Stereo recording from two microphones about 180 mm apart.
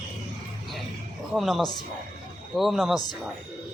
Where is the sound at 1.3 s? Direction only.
Centre (ahead or behind).